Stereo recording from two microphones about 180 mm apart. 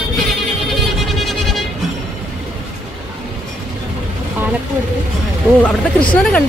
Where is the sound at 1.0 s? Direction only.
Centre (ahead or behind).